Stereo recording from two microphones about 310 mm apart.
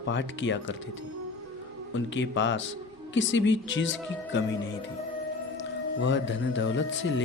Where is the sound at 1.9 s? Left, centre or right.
Left.